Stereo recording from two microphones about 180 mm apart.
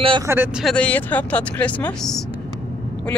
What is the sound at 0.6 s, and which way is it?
Speech, 5° left (ahead or behind).